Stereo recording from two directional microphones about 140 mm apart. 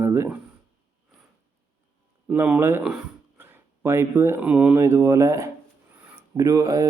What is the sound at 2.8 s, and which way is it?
Speech, 5° right (ahead or behind).